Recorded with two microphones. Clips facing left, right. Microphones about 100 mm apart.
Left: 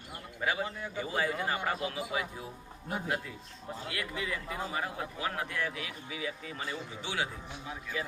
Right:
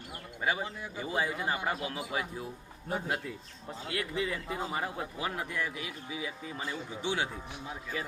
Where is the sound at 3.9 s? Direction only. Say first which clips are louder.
Right 4 dB; 30° right (ahead or behind).